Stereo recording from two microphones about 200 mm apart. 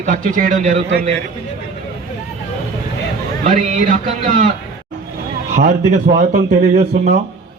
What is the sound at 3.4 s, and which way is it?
A man's voice, 40° right (ahead or behind).